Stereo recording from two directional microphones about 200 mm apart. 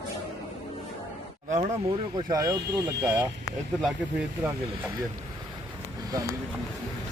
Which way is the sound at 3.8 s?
5° right (ahead or behind).